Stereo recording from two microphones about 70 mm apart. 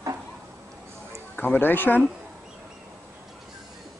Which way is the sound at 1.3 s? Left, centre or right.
Left.